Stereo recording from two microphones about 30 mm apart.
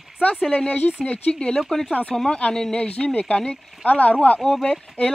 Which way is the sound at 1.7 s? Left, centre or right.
Centre.